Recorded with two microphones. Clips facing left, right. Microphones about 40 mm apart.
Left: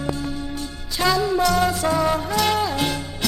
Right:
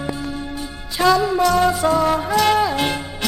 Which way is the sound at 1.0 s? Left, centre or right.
Centre.